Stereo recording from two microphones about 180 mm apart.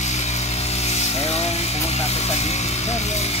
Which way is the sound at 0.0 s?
40° left (ahead or behind).